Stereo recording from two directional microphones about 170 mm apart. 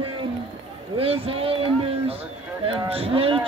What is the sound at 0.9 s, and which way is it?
Speech, 35° right (ahead or behind).